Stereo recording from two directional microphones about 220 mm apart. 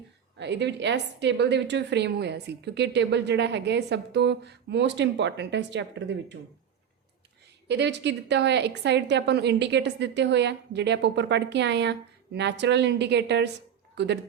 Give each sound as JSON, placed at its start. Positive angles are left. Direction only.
{"t": 0.3, "sound": "a woman's voice", "side_deg": -50}
{"t": 7.7, "sound": "a woman's voice", "side_deg": -50}